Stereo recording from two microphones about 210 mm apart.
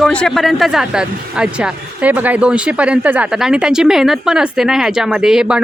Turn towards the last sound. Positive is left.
turn(degrees=-5)  # may be behind; listen again after turning